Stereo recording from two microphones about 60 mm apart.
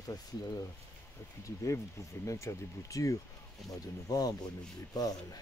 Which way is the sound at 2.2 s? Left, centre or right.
Left.